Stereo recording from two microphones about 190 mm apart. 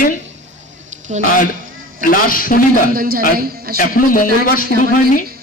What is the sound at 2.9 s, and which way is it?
Speech, 50° right (ahead or behind).